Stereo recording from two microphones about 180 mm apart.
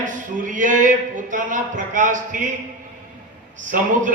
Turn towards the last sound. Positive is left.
turn(degrees=-45)  # may be behind; listen again after turning